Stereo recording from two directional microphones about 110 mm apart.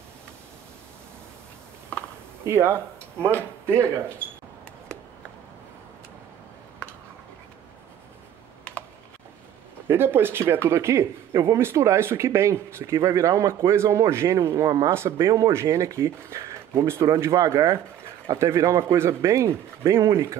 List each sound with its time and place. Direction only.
2.4 s speech: 25° right (ahead or behind)
9.8 s speech: 20° right (ahead or behind)